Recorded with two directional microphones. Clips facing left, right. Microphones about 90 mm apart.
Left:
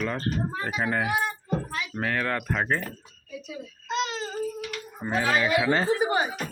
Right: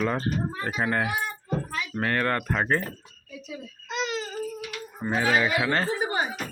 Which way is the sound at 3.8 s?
25° left (ahead or behind).